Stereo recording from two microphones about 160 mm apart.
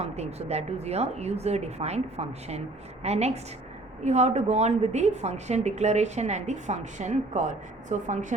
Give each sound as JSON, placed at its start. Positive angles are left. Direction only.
{"t": 0.0, "sound": "a woman's voice", "side_deg": -40}